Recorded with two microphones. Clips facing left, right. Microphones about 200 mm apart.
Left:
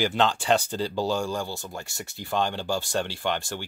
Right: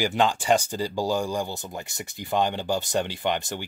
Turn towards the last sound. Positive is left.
turn(degrees=-15)  # may be behind; listen again after turning